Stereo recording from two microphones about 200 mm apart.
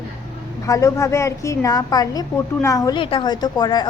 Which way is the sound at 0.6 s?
15° left (ahead or behind).